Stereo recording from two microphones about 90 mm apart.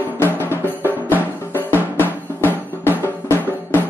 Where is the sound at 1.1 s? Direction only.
20° left (ahead or behind).